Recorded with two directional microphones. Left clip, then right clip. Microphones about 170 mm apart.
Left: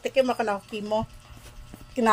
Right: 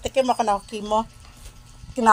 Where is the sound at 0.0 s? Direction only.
10° right (ahead or behind).